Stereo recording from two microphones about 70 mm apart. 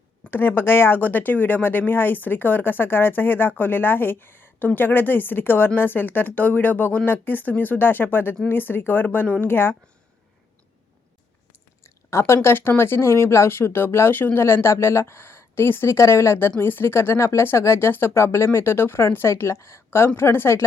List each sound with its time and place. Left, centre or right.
0.3 s speech: left
9.2 s speech: centre
9.5 s speech: left
11.8 s speech: left